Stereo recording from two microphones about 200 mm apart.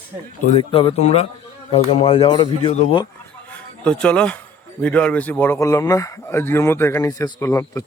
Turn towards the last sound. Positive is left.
turn(degrees=15)  # may be behind; listen again after turning